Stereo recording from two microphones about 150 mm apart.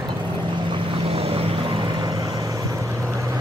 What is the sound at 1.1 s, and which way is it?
Vehicle, 40° right (ahead or behind).